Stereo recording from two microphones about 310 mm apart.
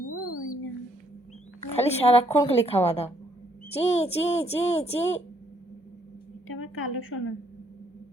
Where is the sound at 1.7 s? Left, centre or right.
Centre.